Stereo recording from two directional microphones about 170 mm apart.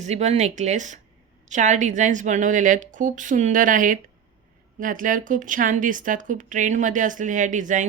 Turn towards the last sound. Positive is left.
turn(degrees=-50)  # may be behind; listen again after turning